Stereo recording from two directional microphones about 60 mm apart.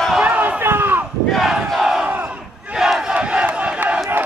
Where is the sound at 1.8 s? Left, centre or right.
Centre.